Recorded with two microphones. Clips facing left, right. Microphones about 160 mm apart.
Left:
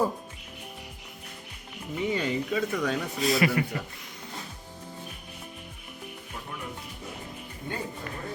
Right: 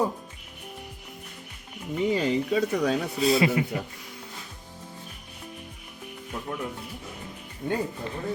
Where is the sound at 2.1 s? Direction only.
35° right (ahead or behind).